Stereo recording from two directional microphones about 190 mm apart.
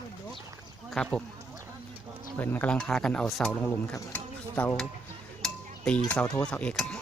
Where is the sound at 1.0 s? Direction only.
5° left (ahead or behind).